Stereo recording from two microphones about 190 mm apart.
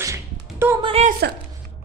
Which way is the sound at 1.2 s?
55° right (ahead or behind).